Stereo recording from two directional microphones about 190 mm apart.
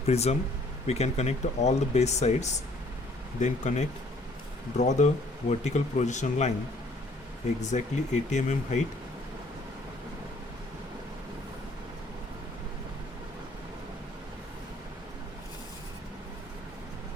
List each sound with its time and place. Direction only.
0.0 s speech: 35° left (ahead or behind)
7.6 s speech: 40° left (ahead or behind)